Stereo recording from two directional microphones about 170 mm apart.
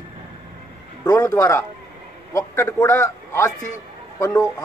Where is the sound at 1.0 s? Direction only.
20° left (ahead or behind).